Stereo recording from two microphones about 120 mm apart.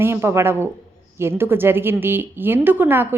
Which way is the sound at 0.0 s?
20° right (ahead or behind).